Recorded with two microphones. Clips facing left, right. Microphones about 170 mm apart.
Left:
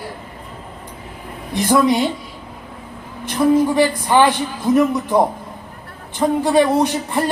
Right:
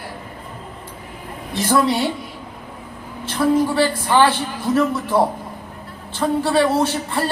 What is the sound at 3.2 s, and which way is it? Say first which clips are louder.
A man's voice: left 3 dB; 15° left (ahead or behind).